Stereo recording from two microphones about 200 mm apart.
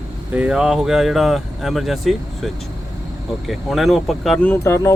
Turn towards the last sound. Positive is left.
turn(degrees=15)  # may be behind; listen again after turning